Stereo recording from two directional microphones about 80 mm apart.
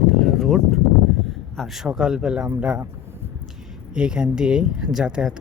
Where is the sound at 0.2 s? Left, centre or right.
Centre.